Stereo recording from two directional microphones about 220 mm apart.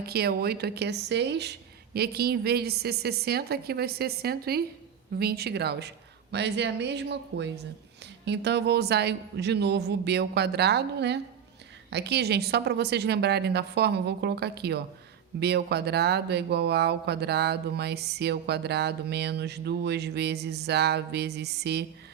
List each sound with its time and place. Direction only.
0.0 s speech: 45° right (ahead or behind)